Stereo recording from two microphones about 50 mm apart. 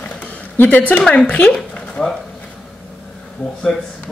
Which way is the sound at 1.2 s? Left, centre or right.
Left.